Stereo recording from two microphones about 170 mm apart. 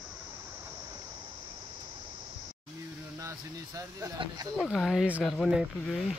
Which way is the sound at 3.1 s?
20° right (ahead or behind).